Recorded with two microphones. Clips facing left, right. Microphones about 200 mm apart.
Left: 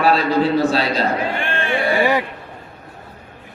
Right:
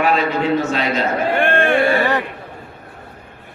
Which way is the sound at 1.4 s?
55° right (ahead or behind).